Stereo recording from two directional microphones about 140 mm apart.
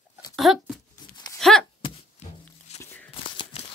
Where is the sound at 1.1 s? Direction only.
30° left (ahead or behind).